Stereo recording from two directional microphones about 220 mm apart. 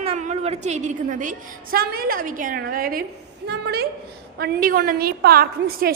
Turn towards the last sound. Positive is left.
turn(degrees=-40)  # may be behind; listen again after turning